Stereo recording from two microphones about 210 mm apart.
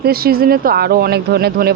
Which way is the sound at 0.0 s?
45° right (ahead or behind).